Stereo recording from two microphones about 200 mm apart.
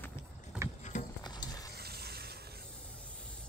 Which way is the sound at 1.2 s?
20° left (ahead or behind).